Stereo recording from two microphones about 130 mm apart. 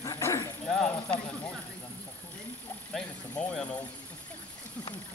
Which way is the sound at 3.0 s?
5° left (ahead or behind).